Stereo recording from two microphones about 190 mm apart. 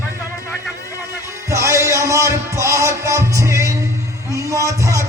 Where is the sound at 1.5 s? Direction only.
15° right (ahead or behind).